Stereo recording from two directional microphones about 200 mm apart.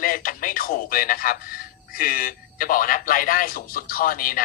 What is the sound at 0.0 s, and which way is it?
Speech, 45° left (ahead or behind).